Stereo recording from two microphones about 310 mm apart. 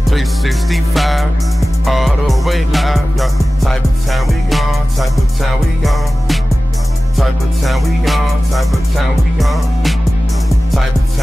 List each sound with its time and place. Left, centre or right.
0.0 s music: centre